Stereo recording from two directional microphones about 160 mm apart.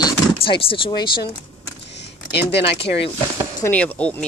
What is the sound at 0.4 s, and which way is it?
Speech, 35° left (ahead or behind).